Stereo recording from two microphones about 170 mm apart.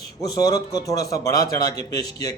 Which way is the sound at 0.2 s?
20° left (ahead or behind).